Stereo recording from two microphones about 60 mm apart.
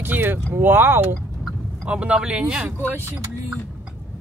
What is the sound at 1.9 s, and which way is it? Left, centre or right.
Speech, centre.